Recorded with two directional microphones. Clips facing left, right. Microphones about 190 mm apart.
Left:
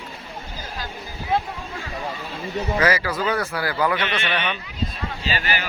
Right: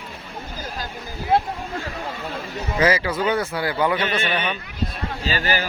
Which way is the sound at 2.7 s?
25° right (ahead or behind).